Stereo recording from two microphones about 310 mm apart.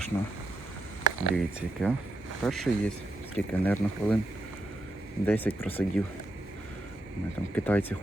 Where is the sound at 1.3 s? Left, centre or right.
Centre.